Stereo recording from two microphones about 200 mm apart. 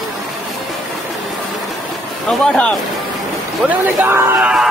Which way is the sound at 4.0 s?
10° right (ahead or behind).